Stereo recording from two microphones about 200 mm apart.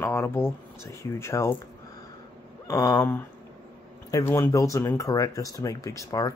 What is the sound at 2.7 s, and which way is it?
Speech, 15° left (ahead or behind).